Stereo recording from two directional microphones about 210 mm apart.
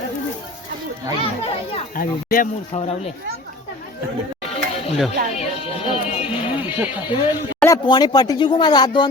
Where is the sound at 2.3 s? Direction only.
40° left (ahead or behind).